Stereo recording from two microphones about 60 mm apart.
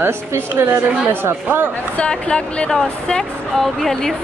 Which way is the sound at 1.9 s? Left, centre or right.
Centre.